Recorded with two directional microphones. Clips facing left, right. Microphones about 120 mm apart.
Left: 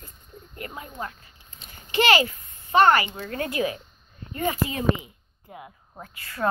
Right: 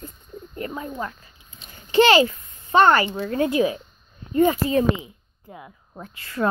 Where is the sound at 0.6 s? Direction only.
30° right (ahead or behind).